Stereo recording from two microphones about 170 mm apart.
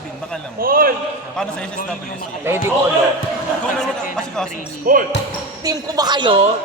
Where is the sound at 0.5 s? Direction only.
60° right (ahead or behind).